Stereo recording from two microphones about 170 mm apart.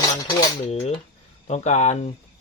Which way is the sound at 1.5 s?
40° left (ahead or behind).